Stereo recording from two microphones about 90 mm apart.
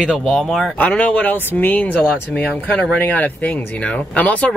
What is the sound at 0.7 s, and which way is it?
Speech, 15° left (ahead or behind).